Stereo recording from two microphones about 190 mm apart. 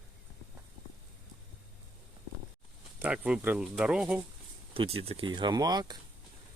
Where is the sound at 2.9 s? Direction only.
5° right (ahead or behind).